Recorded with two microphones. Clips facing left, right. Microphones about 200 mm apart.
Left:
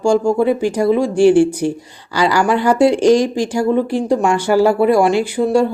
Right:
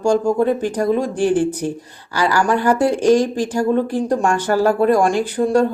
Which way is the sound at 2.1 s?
15° left (ahead or behind).